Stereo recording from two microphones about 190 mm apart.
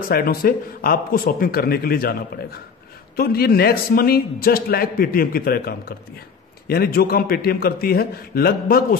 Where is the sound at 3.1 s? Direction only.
55° left (ahead or behind).